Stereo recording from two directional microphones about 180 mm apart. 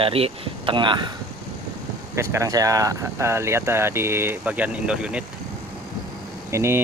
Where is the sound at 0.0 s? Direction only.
30° right (ahead or behind).